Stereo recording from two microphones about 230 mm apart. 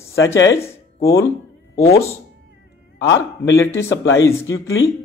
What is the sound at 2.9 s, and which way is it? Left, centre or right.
Speech, left.